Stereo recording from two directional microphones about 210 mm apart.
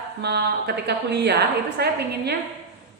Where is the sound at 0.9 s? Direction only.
50° right (ahead or behind).